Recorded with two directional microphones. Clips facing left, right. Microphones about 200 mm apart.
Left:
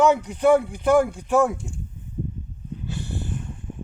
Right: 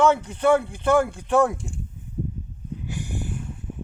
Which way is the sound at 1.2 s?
5° left (ahead or behind).